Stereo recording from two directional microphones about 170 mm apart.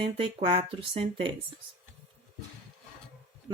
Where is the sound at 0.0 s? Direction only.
30° right (ahead or behind).